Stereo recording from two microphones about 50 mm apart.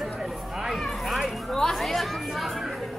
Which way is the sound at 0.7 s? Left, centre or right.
Centre.